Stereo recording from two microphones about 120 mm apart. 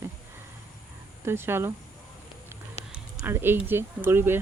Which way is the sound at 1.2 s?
20° right (ahead or behind).